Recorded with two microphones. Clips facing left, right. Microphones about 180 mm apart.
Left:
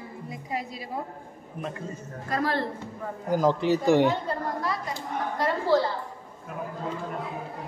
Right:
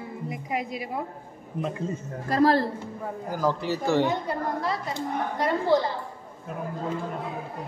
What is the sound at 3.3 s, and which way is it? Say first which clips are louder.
Speech: left 4 dB; 20° left (ahead or behind).